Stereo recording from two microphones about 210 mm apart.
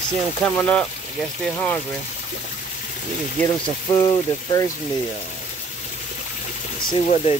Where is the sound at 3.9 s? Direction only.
20° left (ahead or behind).